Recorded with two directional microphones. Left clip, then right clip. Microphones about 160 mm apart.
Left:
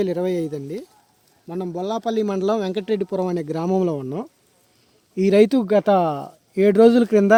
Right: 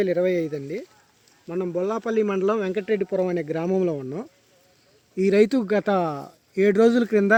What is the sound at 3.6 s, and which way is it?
Speech, 90° left.